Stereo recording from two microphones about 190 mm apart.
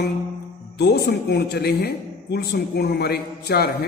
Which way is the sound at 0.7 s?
60° left (ahead or behind).